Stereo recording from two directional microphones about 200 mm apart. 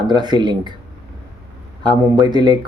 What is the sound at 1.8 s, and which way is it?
Speech, 20° right (ahead or behind).